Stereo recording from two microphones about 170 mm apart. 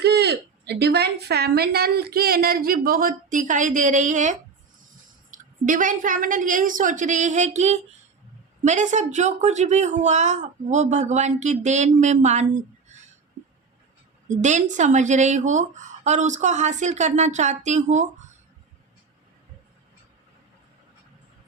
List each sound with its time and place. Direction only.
0.0 s a woman's voice: 75° right (ahead or behind); by 12.5 s 45° right (ahead or behind)
12.9 s a sound: 40° right (ahead or behind)
14.3 s speech: 45° right (ahead or behind)